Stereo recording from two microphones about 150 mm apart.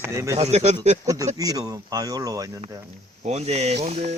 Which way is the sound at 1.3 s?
25° right (ahead or behind).